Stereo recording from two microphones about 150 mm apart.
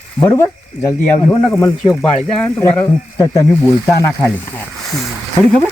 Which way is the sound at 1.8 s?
5° left (ahead or behind).